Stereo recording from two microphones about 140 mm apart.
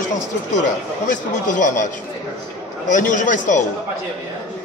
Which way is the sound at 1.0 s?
65° left (ahead or behind).